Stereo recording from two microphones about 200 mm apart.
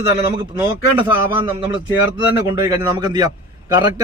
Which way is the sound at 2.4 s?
15° right (ahead or behind).